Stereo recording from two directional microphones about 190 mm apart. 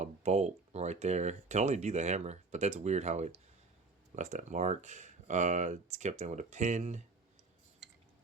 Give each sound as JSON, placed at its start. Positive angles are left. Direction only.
{"t": 0.0, "sound": "speech", "side_deg": -35}